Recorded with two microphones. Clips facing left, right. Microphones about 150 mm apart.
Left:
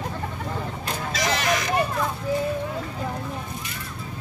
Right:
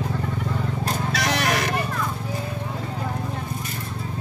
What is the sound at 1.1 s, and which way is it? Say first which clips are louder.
Vehicle: left 1 dB; 65° right (ahead or behind).